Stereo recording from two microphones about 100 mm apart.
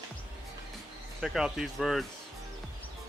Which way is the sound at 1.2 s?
5° right (ahead or behind).